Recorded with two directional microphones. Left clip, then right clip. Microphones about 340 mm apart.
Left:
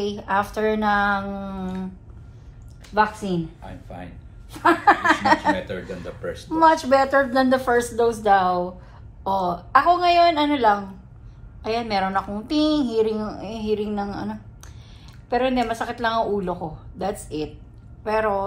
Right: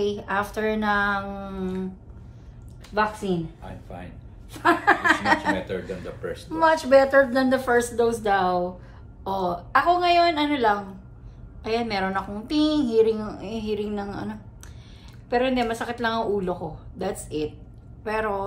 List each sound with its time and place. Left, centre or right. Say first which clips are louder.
0.0 s a woman's voice: left 2 dB; centre
2.9 s a woman's voice: left 3 dB; centre
3.6 s speech: left 1 dB; centre
4.5 s a woman's voice: left 3 dB; centre
5.6 s speech: even; centre
6.5 s a woman's voice: left 1 dB; centre